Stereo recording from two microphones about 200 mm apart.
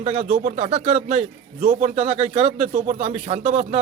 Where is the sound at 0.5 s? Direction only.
30° right (ahead or behind).